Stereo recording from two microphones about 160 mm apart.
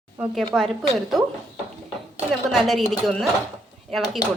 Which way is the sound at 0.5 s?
Centre (ahead or behind).